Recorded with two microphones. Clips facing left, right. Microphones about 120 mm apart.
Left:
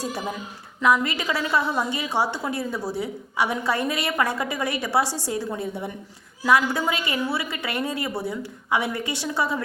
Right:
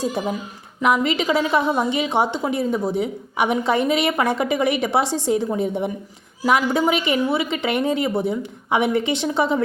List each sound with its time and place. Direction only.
0.8 s a woman's voice: 20° right (ahead or behind)